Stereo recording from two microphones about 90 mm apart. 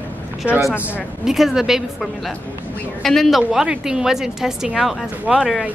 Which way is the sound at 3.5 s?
10° right (ahead or behind).